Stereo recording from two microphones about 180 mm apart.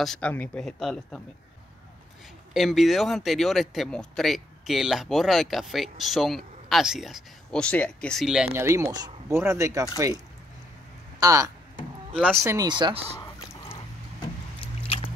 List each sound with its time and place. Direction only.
0.0 s speech: 5° left (ahead or behind)
2.5 s speech: centre (ahead or behind)
8.6 s speech: 20° right (ahead or behind)
14.6 s biting: 30° left (ahead or behind)